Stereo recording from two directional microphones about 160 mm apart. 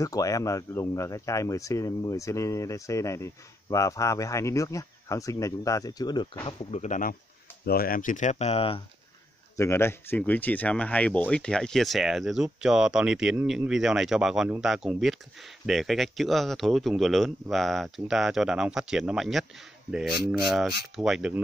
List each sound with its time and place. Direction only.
0.0 s speech: 20° left (ahead or behind)
6.4 s speech: 35° left (ahead or behind); by 7.2 s 55° left (ahead or behind)
7.6 s speech: 70° left (ahead or behind); by 8.8 s 35° left (ahead or behind)
9.6 s speech: 15° left (ahead or behind); by 21.3 s centre (ahead or behind)